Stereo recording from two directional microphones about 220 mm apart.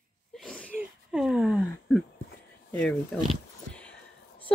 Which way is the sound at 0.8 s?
Centre (ahead or behind).